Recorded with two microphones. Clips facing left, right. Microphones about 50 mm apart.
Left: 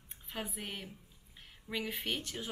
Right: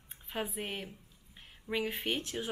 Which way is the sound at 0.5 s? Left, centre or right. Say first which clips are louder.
Right 4 dB; right.